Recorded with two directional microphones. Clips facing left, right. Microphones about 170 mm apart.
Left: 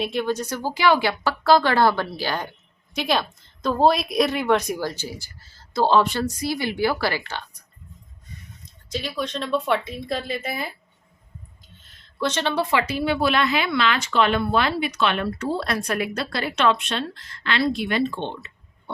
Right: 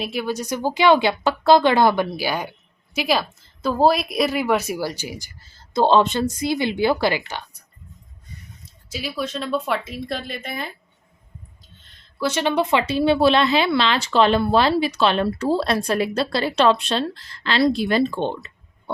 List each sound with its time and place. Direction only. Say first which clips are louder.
0.0 s a woman's voice: left 1 dB; 5° right (ahead or behind)
8.9 s a woman's voice: even; 5° right (ahead or behind)
12.2 s speech: right 3 dB; 10° right (ahead or behind); by 18.5 s 40° right (ahead or behind)